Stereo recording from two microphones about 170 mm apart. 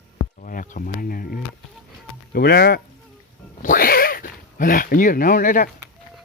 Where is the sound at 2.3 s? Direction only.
70° left (ahead or behind).